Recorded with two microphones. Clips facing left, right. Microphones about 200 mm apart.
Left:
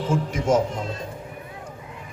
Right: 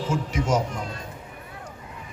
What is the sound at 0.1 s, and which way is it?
Speech, 55° left (ahead or behind).